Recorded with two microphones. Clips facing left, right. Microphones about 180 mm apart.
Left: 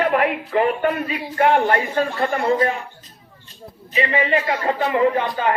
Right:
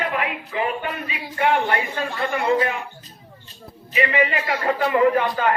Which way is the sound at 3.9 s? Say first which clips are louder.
Left 1 dB; 30° left (ahead or behind).